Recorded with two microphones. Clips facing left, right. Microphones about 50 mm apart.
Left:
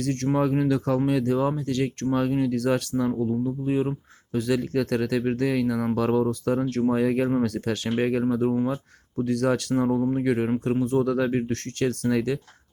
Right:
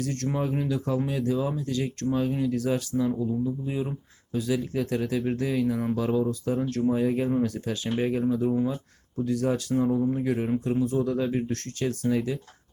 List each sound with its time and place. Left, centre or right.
0.0 s speech: left
0.3 s speech: left
4.3 s speech: left
6.7 s speech: left
6.9 s speech: left
10.0 s speech: left
10.2 s speech: left
10.6 s speech: left
11.0 s speech: left